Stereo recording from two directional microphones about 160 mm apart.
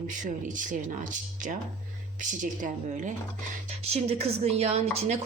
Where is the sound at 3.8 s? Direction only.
40° right (ahead or behind).